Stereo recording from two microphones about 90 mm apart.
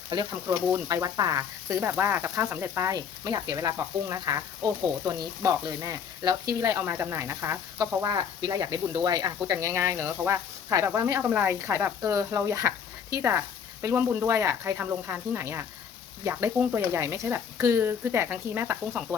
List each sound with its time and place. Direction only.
0.4 s speech: 30° right (ahead or behind)
1.8 s speech: 25° right (ahead or behind)
2.9 s speech: 45° right (ahead or behind); by 7.6 s 30° right (ahead or behind)
7.8 s speech: 40° right (ahead or behind)
11.2 s speech: 15° right (ahead or behind); by 13.4 s 35° right (ahead or behind)
13.9 s speech: 20° right (ahead or behind)
16.7 s speech: 30° right (ahead or behind)